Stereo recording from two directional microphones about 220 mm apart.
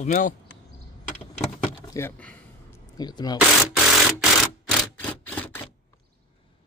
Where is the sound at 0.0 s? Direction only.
35° left (ahead or behind).